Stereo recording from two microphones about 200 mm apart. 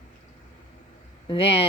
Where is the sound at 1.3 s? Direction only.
25° left (ahead or behind).